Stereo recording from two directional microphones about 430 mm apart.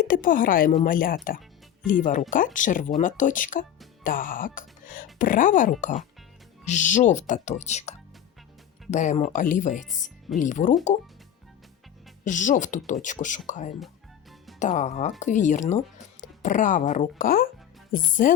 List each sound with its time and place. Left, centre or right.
0.0 s speech: centre
9.9 s speech: centre
10.4 s speech: centre
12.2 s speech: centre